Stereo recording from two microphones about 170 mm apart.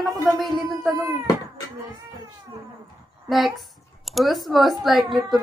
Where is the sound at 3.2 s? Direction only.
Centre (ahead or behind).